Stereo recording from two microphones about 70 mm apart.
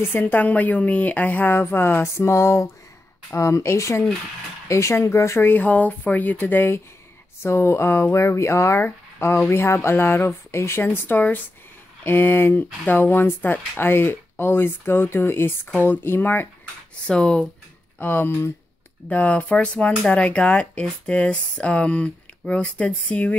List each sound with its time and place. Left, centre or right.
0.2 s speech: left
5.5 s speech: left
17.0 s speech: centre
17.9 s speech: left
19.0 s speech: centre